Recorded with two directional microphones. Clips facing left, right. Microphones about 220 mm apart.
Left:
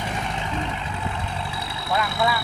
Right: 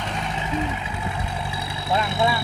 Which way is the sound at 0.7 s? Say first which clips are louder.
Even; 10° right (ahead or behind).